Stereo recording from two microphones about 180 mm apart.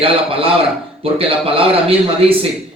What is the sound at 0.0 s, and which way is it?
A man's voice, 30° right (ahead or behind).